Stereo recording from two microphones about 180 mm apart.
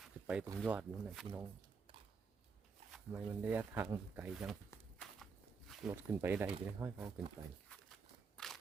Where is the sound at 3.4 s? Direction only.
10° right (ahead or behind).